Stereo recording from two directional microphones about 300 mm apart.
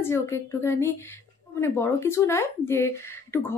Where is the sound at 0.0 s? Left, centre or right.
Centre.